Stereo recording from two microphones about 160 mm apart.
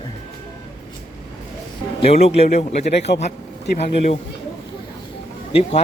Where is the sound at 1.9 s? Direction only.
40° left (ahead or behind).